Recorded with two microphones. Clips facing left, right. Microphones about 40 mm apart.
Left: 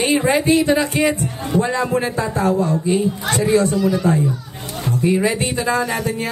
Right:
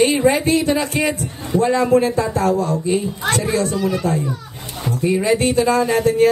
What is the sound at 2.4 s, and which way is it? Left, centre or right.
Speech, left.